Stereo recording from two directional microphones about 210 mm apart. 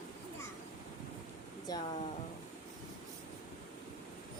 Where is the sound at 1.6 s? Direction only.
20° left (ahead or behind).